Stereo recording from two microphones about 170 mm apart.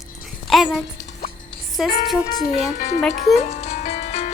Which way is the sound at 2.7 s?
45° left (ahead or behind).